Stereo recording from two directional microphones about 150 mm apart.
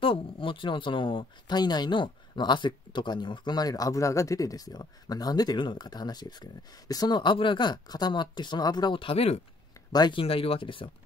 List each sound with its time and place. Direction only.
0.0 s speech: 35° left (ahead or behind)
9.9 s speech: 30° left (ahead or behind)